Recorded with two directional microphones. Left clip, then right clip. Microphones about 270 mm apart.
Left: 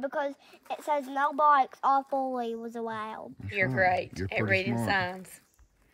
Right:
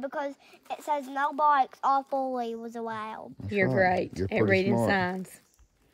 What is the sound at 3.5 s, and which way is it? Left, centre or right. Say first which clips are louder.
Speech: right 1 dB; right.